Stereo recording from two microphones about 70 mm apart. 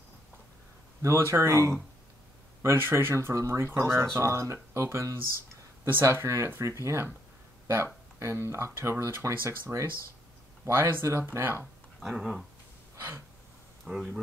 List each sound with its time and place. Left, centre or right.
1.0 s speech: right
12.0 s speech: centre
13.8 s speech: centre